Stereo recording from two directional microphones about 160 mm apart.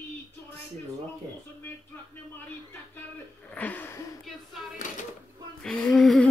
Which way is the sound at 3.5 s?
10° left (ahead or behind).